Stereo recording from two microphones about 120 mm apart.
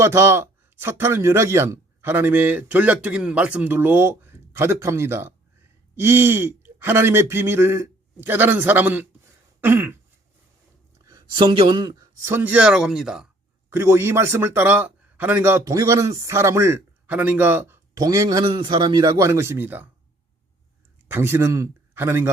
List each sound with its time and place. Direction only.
0.0 s speech: 20° right (ahead or behind)
9.6 s throat clearing: 20° right (ahead or behind)
11.0 s speech: 30° right (ahead or behind)
12.2 s speech: 15° right (ahead or behind)
13.7 s speech: 20° right (ahead or behind)
17.9 s speech: 30° right (ahead or behind)
18.4 s a man's voice: 40° right (ahead or behind); by 19.9 s 15° right (ahead or behind)
21.1 s speech: 20° right (ahead or behind)